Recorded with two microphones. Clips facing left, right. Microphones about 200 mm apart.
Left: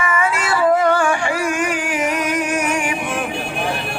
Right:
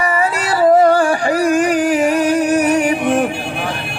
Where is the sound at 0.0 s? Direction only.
35° right (ahead or behind).